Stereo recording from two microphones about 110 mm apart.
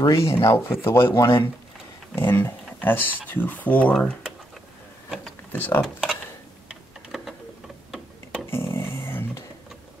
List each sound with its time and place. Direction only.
0.0 s speech: 30° left (ahead or behind)
5.5 s speech: 20° left (ahead or behind)
5.8 s speech: 5° left (ahead or behind)
6.7 s a sound: 5° right (ahead or behind)
7.9 s tick-tock: 5° right (ahead or behind)
8.5 s dog: 25° left (ahead or behind)